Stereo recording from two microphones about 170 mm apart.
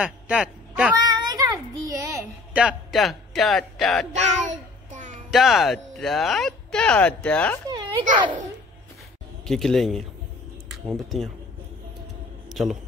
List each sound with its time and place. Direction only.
0.0 s speech: 5° right (ahead or behind)
0.9 s a child's voice: 25° right (ahead or behind)
2.5 s speech: 5° right (ahead or behind)
4.5 s babbling: 45° right (ahead or behind)
5.3 s speech: centre (ahead or behind)
7.7 s a sound: 30° right (ahead or behind)
9.5 s speech: centre (ahead or behind)
12.4 s a sound: centre (ahead or behind)